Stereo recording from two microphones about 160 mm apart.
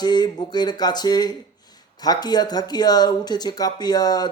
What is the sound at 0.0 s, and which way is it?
Speech, 25° left (ahead or behind).